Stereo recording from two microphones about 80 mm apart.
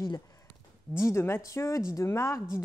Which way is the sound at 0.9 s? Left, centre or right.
Left.